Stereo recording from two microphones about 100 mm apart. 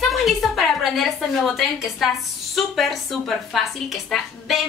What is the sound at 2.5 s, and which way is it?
A woman's voice, centre (ahead or behind).